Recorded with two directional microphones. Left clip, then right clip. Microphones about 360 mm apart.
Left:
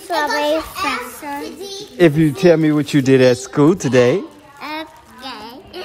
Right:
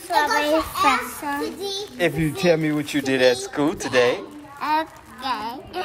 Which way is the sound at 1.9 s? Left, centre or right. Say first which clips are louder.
Left 10 dB; left.